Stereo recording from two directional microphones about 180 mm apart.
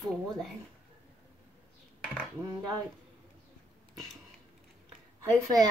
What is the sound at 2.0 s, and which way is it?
Dishes, 5° left (ahead or behind).